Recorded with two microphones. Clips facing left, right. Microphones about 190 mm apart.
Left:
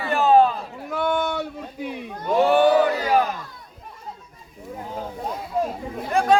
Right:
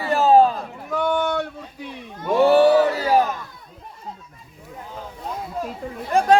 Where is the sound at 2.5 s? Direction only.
35° right (ahead or behind).